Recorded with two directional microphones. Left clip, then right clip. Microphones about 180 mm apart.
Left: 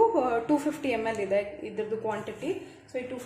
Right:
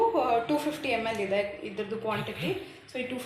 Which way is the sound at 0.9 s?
40° left (ahead or behind).